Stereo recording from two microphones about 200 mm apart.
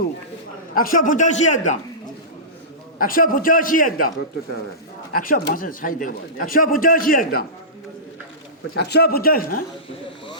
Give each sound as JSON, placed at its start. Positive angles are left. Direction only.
{"t": 0.7, "sound": "a man's voice", "side_deg": 45}
{"t": 3.0, "sound": "a man's voice", "side_deg": 45}
{"t": 5.2, "sound": "a man's voice", "side_deg": 45}
{"t": 8.7, "sound": "a man's voice", "side_deg": 55}